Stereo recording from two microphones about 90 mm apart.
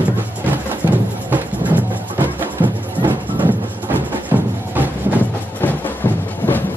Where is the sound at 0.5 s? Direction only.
20° right (ahead or behind).